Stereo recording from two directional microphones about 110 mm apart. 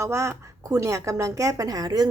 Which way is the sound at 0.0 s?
25° right (ahead or behind).